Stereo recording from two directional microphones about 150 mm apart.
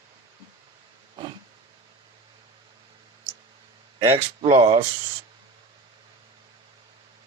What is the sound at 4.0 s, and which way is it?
Speech, 40° right (ahead or behind).